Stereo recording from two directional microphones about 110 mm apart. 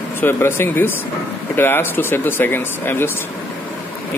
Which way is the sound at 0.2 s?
20° left (ahead or behind).